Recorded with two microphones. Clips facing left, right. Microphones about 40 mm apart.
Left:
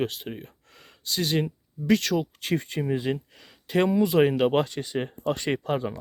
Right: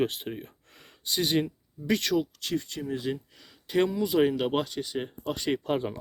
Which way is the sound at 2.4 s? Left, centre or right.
Left.